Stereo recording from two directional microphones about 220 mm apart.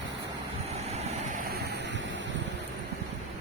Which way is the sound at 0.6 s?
30° right (ahead or behind).